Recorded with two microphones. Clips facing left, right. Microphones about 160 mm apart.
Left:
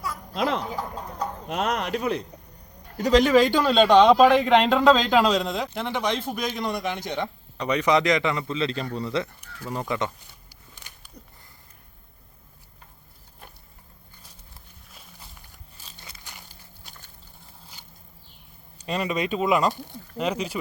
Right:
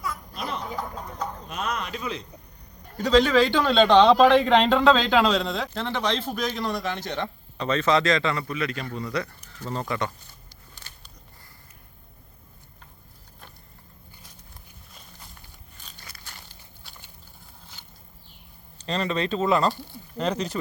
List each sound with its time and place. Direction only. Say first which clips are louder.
0.3 s a sound: left 10 dB; 90° left
1.5 s a man's voice: left 7 dB; 75° left (ahead or behind); by 2.2 s 60° left (ahead or behind)
3.0 s a man's voice: left 1 dB; 15° left (ahead or behind)
9.6 s a man's voice: left 1 dB; 10° left (ahead or behind)
10.5 s walk: left 1 dB; 15° left (ahead or behind)
16.0 s a sound: left 1 dB; 20° left (ahead or behind)
18.8 s a man's voice: even; 15° left (ahead or behind)